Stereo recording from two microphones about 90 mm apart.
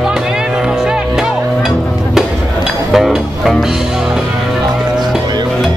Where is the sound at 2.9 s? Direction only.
Centre (ahead or behind).